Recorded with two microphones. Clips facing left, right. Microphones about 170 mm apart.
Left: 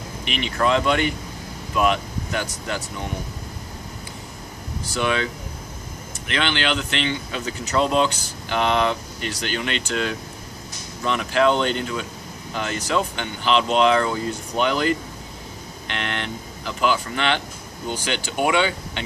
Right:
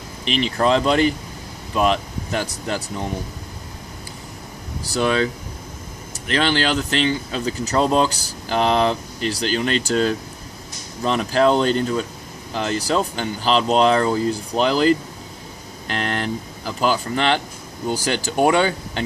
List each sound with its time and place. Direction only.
0.3 s speech: 35° right (ahead or behind)
4.9 s speech: 35° right (ahead or behind)